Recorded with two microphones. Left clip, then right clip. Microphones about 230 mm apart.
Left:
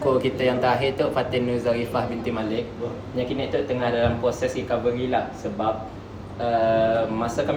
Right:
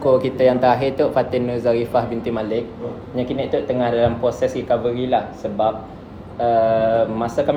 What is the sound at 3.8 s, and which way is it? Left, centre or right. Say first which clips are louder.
Speech: right 5 dB; right.